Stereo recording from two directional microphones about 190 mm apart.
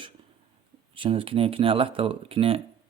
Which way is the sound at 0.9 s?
30° right (ahead or behind).